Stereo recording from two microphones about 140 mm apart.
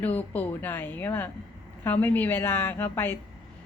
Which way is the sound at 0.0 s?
10° left (ahead or behind).